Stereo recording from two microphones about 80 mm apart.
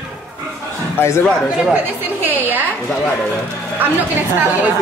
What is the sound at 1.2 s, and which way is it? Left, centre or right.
Speech, centre.